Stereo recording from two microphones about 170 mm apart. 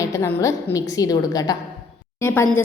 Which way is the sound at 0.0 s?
15° left (ahead or behind).